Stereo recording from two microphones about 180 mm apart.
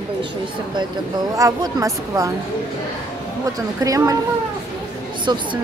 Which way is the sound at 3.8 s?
20° right (ahead or behind).